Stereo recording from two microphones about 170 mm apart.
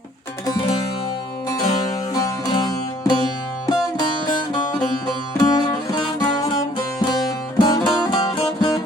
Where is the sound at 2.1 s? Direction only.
20° left (ahead or behind).